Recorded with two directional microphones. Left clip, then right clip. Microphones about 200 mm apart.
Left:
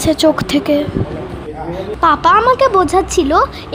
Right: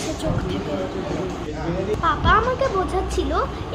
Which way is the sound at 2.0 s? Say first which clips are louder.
Left 9 dB; 65° left (ahead or behind).